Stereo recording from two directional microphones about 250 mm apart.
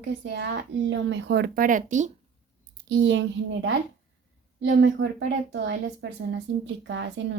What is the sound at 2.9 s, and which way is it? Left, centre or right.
A woman's voice, right.